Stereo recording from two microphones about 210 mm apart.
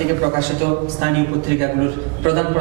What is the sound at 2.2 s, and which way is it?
Speech, 15° right (ahead or behind).